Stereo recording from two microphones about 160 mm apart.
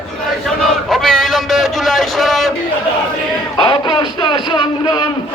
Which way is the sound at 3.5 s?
30° left (ahead or behind).